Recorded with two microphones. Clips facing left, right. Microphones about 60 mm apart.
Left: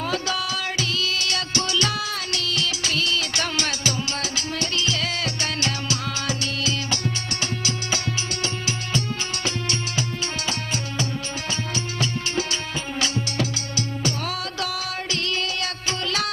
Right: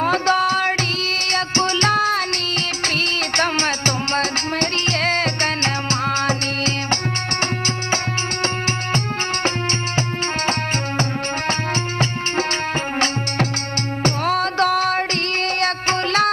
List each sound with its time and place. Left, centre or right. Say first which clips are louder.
0.0 s music: right 9 dB; right
11.4 s music: right 6 dB; right
14.0 s music: right 11 dB; right